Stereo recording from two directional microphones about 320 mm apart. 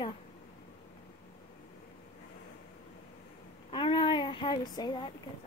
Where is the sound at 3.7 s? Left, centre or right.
Centre.